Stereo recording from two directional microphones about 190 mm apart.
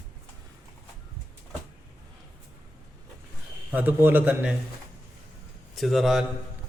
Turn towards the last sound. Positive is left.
turn(degrees=0)  # may be behind; listen again after turning